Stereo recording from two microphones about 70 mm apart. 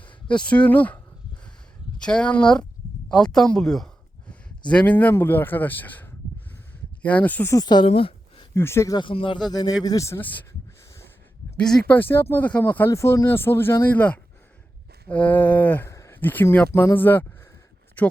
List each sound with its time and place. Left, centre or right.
0.0 s speech: centre
2.0 s speech: centre
4.7 s speech: left
7.6 s speech: left
8.5 s speech: left
9.5 s speech: left
9.8 s speech: left
10.2 s speech: left
11.6 s speech: centre
11.9 s speech: left
12.9 s speech: left
13.9 s speech: left
15.9 s a sound: left
16.2 s speech: left